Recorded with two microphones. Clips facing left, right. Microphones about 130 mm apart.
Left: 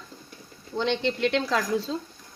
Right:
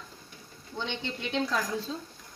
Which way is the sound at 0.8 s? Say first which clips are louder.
Left 10 dB; 90° left.